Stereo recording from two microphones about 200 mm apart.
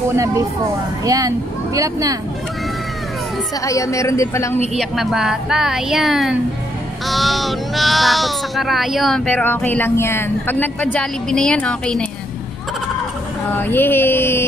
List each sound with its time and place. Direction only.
1.0 s speech: 15° right (ahead or behind)
3.6 s speech: 15° left (ahead or behind)
4.7 s speech: centre (ahead or behind)
13.6 s speech: 10° left (ahead or behind)